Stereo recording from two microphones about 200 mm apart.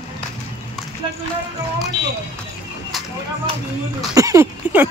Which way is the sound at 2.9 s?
Centre (ahead or behind).